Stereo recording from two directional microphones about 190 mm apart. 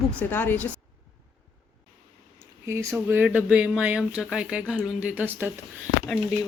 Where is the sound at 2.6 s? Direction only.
15° right (ahead or behind).